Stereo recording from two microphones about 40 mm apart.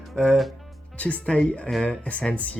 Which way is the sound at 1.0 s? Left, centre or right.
Left.